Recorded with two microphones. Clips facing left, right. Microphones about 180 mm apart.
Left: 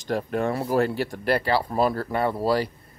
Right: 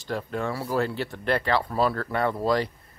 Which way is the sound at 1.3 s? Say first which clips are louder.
Left 1 dB; 30° left (ahead or behind).